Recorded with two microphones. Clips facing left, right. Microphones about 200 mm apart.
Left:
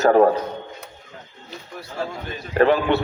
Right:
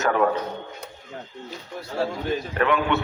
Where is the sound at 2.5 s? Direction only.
35° left (ahead or behind).